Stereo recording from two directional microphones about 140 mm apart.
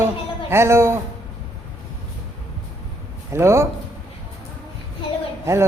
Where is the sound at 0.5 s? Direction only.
20° right (ahead or behind).